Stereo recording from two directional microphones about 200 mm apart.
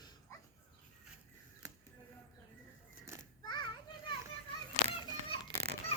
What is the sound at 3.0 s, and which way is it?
Children playing, 15° right (ahead or behind).